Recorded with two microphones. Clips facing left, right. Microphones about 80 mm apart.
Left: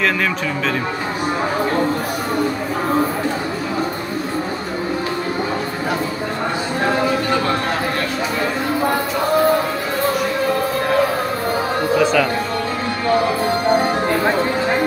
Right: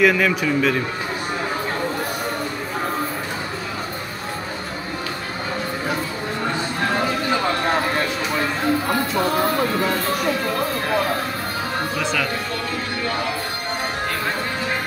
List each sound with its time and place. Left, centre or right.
0.0 s a man's voice: centre
12.0 s music: centre